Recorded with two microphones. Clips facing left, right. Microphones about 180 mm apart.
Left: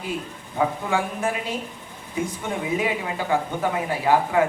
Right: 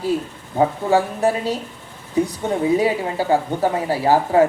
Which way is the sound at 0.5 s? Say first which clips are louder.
Right 6 dB; 35° right (ahead or behind).